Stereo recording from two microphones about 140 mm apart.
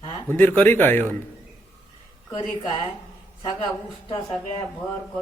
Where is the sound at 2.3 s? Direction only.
35° left (ahead or behind).